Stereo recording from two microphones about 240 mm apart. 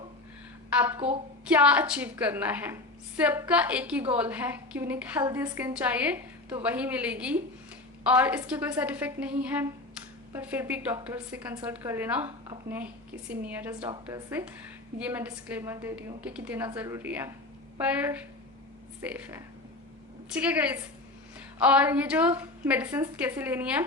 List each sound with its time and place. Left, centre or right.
0.9 s a woman's voice: right
1.5 s a woman's voice: centre